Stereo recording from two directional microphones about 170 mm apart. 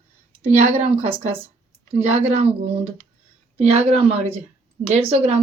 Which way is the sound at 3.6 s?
35° right (ahead or behind).